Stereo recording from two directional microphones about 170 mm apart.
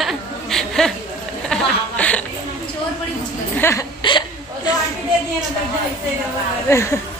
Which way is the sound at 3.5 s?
15° left (ahead or behind).